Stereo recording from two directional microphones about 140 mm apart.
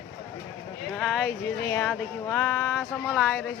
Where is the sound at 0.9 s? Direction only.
5° right (ahead or behind).